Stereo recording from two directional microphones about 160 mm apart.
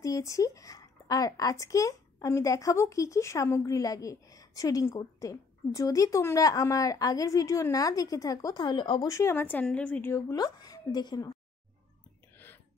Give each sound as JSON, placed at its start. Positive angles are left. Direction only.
{"t": 0.0, "sound": "a woman's voice", "side_deg": 20}
{"t": 9.1, "sound": "speech", "side_deg": 15}
{"t": 10.3, "sound": "a woman's voice", "side_deg": 25}